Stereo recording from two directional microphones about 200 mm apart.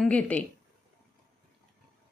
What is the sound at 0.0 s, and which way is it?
Speech, 5° left (ahead or behind).